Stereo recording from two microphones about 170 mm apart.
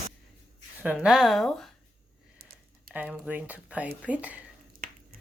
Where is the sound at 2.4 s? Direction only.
65° right (ahead or behind).